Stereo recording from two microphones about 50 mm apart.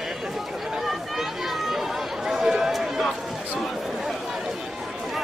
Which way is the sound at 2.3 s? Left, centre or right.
Centre.